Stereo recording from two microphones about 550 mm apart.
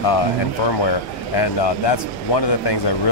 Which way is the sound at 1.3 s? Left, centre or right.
Left.